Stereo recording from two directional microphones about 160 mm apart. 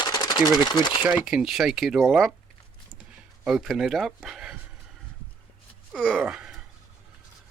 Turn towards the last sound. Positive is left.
turn(degrees=-5)  # may be behind; listen again after turning